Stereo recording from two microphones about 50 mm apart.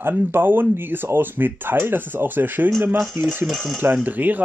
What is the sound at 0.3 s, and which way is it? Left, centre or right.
Speech, right.